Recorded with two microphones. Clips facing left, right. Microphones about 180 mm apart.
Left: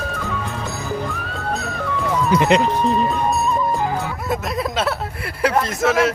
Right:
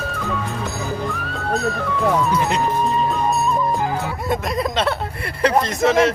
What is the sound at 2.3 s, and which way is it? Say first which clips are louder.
Speech: left 4 dB; 90° left.